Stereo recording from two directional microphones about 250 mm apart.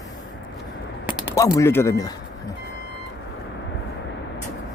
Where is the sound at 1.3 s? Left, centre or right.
Centre.